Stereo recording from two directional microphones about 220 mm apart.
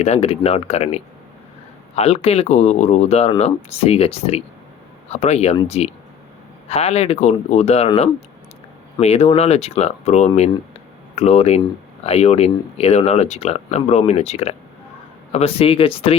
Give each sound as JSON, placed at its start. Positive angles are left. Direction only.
{"t": 0.0, "sound": "speech", "side_deg": 30}